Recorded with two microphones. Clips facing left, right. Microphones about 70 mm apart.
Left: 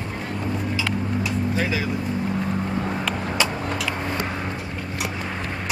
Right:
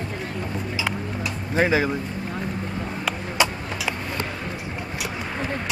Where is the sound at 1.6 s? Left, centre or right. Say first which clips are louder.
Right 9 dB; right.